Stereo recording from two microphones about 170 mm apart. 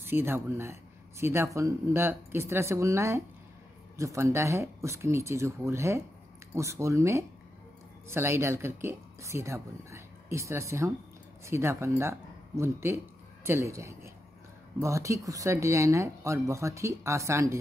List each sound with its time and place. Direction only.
0.0 s speech: 15° right (ahead or behind)